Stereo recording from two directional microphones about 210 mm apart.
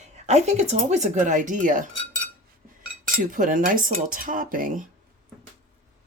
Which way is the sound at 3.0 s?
40° right (ahead or behind).